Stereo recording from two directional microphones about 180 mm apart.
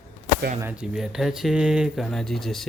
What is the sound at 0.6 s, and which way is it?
Speech, 5° right (ahead or behind).